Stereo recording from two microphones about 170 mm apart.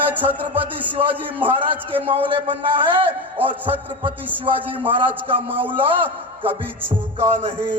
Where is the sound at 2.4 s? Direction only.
30° right (ahead or behind).